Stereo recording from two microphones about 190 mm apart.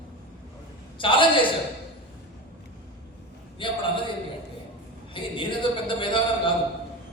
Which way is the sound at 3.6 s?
25° left (ahead or behind).